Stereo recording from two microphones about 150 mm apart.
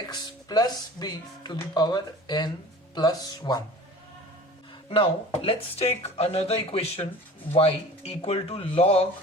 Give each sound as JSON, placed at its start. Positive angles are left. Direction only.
{"t": 0.0, "sound": "speech", "side_deg": 25}
{"t": 4.9, "sound": "speech", "side_deg": 40}